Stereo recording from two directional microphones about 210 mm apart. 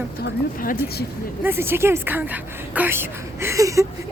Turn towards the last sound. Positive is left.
turn(degrees=-15)  # may be behind; listen again after turning